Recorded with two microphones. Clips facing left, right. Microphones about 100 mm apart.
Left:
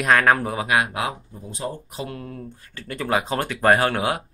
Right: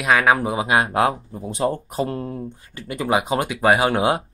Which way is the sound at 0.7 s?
30° right (ahead or behind).